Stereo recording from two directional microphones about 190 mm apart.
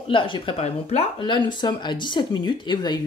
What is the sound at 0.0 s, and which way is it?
Speech, 25° left (ahead or behind).